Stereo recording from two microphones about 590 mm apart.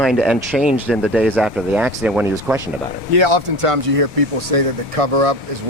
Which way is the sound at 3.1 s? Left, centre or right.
Right.